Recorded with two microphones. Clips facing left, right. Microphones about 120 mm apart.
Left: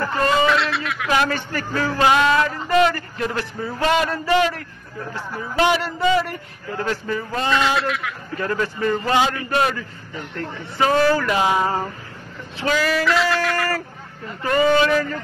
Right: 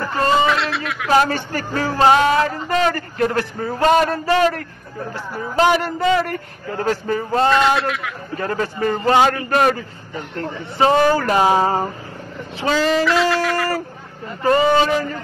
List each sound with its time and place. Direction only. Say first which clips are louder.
0.5 s a sound: even; centre (ahead or behind)
1.1 s music: right 5 dB; 35° right (ahead or behind)
5.6 s a man's voice: right 3 dB; 45° right (ahead or behind)
7.5 s a sound: right 3 dB; centre (ahead or behind)
8.4 s music: right 1 dB; 35° right (ahead or behind)
10.4 s music: right 4 dB; 30° right (ahead or behind)
12.6 s speech: right 3 dB; 25° right (ahead or behind)
13.0 s a sound: right 2 dB; centre (ahead or behind)
14.4 s speech: right 2 dB; 25° right (ahead or behind)